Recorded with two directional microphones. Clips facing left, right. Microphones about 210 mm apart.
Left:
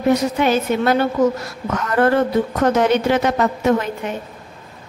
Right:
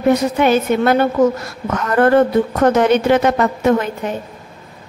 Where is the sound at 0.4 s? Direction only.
55° right (ahead or behind).